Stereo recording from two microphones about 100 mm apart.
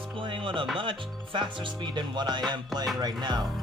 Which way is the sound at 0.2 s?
55° right (ahead or behind).